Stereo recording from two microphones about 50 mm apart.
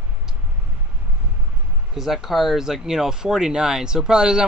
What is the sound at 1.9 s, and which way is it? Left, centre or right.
Speech, centre.